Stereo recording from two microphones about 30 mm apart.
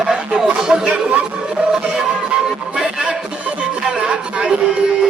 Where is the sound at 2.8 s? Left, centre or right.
Right.